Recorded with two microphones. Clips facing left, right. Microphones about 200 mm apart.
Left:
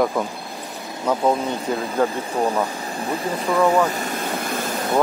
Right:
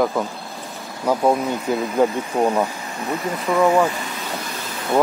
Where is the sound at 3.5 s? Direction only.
15° right (ahead or behind).